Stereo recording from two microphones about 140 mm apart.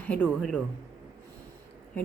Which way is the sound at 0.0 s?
10° left (ahead or behind).